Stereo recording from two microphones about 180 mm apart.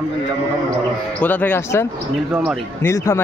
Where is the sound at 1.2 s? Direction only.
10° left (ahead or behind).